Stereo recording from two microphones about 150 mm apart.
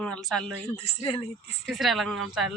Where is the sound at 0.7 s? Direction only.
40° left (ahead or behind).